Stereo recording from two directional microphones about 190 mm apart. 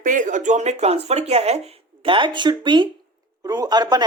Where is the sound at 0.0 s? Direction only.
45° right (ahead or behind).